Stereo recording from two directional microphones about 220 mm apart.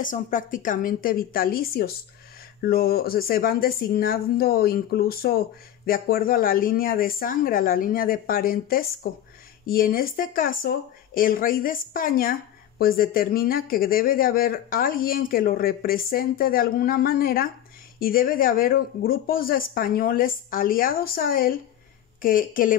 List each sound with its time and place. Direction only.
0.0 s speech: 35° left (ahead or behind)